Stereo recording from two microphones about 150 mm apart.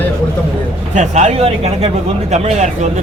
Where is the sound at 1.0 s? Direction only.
50° right (ahead or behind).